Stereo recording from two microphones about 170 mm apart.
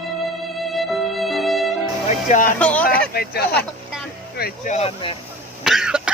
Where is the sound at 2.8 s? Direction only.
65° left (ahead or behind).